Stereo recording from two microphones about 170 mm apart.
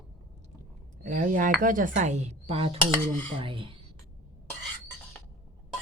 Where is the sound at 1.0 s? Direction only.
50° right (ahead or behind).